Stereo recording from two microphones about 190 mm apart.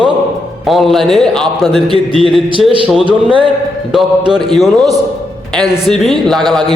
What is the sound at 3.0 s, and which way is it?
Speech, 25° right (ahead or behind).